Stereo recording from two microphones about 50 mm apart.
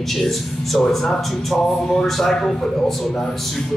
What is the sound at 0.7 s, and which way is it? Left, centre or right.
A man's voice, centre.